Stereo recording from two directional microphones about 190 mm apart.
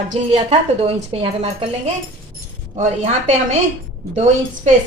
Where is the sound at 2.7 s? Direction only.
40° right (ahead or behind).